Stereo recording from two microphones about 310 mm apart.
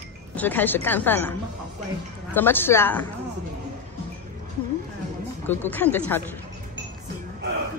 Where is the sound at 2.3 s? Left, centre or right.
Centre.